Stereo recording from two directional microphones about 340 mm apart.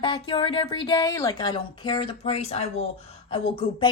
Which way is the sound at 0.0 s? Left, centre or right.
Centre.